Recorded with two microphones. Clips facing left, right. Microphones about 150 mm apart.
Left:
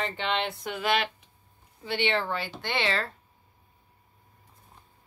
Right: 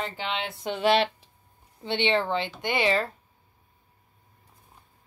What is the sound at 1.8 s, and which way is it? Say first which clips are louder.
Speech: right 3 dB; 20° right (ahead or behind).